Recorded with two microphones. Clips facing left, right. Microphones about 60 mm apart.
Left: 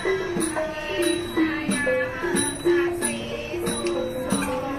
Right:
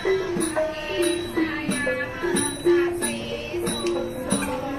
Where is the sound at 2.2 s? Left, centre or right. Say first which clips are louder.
Even; centre.